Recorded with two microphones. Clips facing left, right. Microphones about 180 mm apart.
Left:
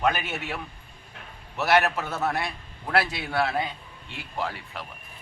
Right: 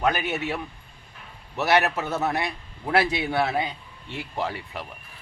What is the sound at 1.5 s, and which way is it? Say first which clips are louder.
A man's voice: right 1 dB; 20° right (ahead or behind).